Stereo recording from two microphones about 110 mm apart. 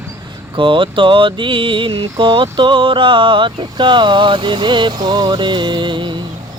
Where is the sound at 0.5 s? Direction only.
50° right (ahead or behind).